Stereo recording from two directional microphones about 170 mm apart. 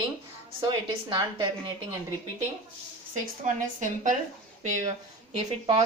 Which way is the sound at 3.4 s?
45° right (ahead or behind).